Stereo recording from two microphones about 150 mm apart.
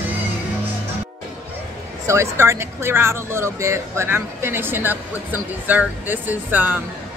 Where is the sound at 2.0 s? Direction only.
20° right (ahead or behind).